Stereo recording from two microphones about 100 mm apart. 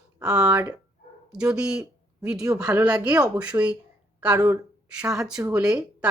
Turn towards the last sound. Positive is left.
turn(degrees=-10)  # may be behind; listen again after turning